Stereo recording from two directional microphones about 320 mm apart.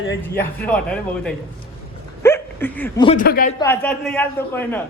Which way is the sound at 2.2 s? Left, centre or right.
Centre.